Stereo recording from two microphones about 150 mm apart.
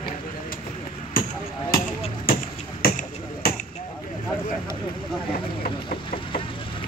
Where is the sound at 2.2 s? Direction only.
75° left (ahead or behind).